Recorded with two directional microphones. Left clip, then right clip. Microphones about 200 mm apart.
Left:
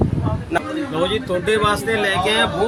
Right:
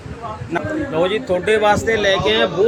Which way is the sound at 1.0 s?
20° left (ahead or behind).